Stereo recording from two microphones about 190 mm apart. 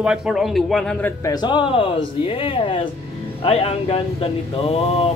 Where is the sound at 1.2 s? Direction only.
20° left (ahead or behind).